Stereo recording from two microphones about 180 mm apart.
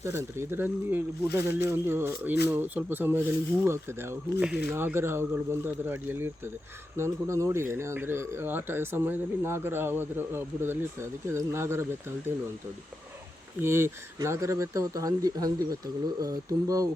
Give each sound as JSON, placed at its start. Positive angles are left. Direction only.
{"t": 0.0, "sound": "speech", "side_deg": -15}
{"t": 13.6, "sound": "speech", "side_deg": -15}